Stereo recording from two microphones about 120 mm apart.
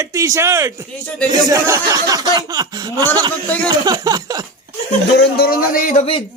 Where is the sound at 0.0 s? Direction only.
25° right (ahead or behind).